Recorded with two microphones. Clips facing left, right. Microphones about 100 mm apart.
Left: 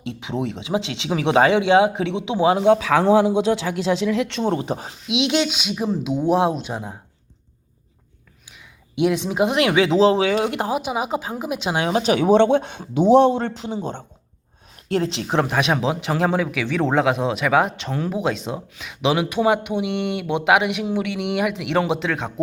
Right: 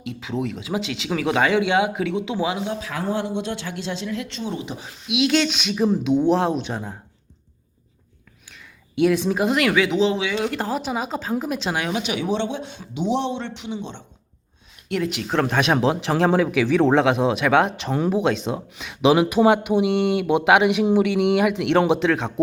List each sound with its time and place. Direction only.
0.0 s speech: 25° left (ahead or behind)
2.6 s a man's voice: 90° left
3.9 s speech: 80° left; by 4.9 s 45° left (ahead or behind)
4.9 s a woman's voice: 25° left (ahead or behind); by 6.9 s 10° left (ahead or behind)
8.4 s a woman's voice: 15° left (ahead or behind); by 10.5 s 35° left (ahead or behind)
10.5 s a woman's voice: 15° left (ahead or behind)
11.8 s speech: 35° left (ahead or behind)
14.8 s speech: 30° left (ahead or behind)
15.4 s speech: 5° left (ahead or behind)
19.4 s a sound: 20° right (ahead or behind)
19.9 s speech: centre (ahead or behind)